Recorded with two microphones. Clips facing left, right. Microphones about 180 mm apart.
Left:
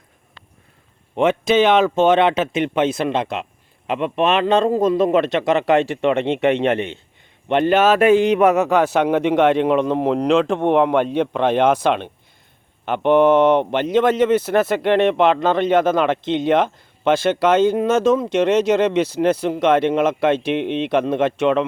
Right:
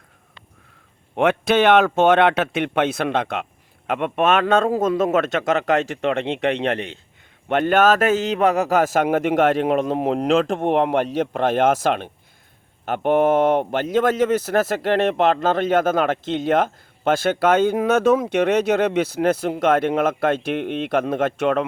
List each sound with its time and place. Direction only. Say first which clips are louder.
1.1 s a man's voice: left 2 dB; 60° right (ahead or behind); by 5.8 s 40° right (ahead or behind)
6.2 s a man's voice: left 4 dB; centre (ahead or behind)
7.4 s a man's voice: left 1 dB; 50° right (ahead or behind)